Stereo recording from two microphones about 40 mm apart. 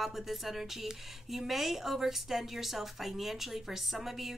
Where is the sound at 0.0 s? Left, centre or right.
Centre.